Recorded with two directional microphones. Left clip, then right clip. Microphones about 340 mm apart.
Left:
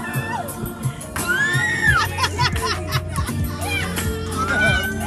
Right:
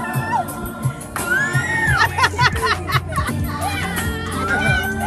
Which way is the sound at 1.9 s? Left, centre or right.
Centre.